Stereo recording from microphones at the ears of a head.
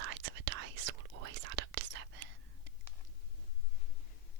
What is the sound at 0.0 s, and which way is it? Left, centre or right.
Whispering, right.